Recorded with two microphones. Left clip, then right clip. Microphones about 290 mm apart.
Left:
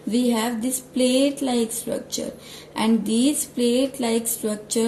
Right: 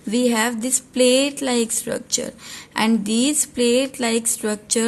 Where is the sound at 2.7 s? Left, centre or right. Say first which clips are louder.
Right 2 dB; right.